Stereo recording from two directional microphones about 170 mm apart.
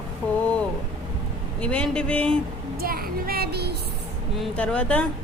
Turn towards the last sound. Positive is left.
turn(degrees=5)  # may be behind; listen again after turning